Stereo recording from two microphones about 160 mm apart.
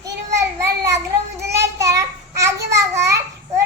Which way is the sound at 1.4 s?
20° right (ahead or behind).